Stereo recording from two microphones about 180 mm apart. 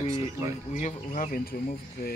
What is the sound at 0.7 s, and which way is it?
Speech, 45° left (ahead or behind).